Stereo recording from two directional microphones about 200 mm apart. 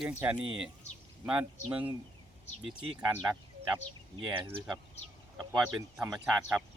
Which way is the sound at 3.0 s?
5° right (ahead or behind).